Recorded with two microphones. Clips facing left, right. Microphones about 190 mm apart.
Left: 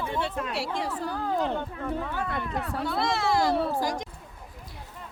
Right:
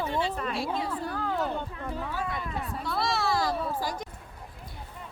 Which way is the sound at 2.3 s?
65° left (ahead or behind).